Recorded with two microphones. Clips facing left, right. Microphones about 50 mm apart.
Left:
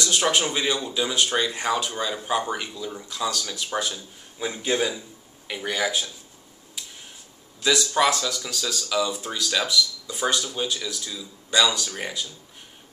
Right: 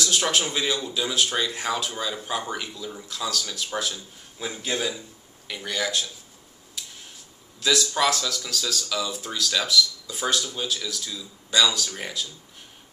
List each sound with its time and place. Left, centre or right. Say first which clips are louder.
0.0 s speech: left 2 dB; centre
7.6 s speech: left 2 dB; centre